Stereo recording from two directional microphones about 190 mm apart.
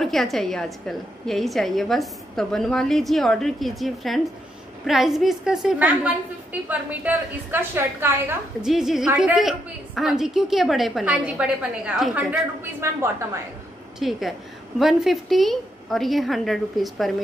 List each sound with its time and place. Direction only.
0.0 s a woman's voice: centre (ahead or behind)
13.9 s a woman's voice: centre (ahead or behind)